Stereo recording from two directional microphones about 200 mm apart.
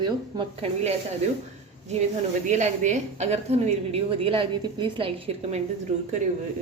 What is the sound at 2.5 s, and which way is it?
A woman's voice, 35° right (ahead or behind).